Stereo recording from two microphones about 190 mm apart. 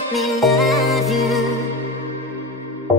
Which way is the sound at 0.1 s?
Centre (ahead or behind).